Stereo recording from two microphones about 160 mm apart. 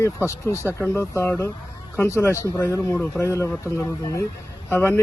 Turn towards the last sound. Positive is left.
turn(degrees=15)  # may be behind; listen again after turning